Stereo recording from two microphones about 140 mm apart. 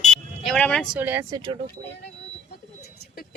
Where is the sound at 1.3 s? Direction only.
35° right (ahead or behind).